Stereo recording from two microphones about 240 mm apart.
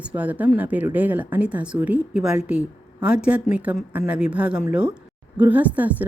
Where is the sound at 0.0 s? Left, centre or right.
Centre.